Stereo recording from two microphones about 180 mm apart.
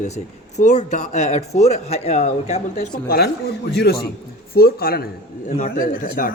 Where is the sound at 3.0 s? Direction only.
60° left (ahead or behind).